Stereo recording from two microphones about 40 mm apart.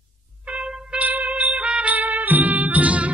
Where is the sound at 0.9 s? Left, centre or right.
Right.